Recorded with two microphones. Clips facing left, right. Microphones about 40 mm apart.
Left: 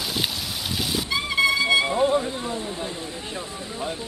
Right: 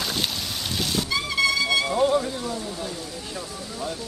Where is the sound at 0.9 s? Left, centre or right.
Centre.